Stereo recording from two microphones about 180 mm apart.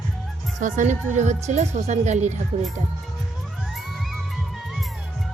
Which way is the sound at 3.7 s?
Centre (ahead or behind).